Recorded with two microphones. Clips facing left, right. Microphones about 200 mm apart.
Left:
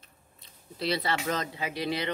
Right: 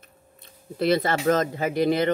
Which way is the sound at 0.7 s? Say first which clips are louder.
Right 8 dB; 50° right (ahead or behind).